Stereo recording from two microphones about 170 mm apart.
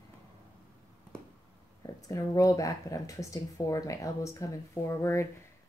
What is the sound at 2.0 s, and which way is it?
Speech, 20° left (ahead or behind).